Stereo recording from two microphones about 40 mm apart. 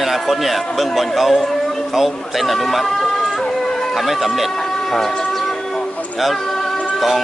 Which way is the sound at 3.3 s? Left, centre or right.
Centre.